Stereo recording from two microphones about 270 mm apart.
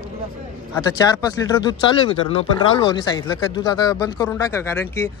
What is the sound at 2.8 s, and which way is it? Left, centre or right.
Speech, centre.